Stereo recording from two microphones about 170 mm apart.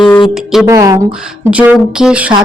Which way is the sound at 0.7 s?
20° right (ahead or behind).